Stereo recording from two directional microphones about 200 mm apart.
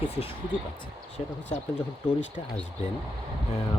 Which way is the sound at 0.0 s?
30° left (ahead or behind).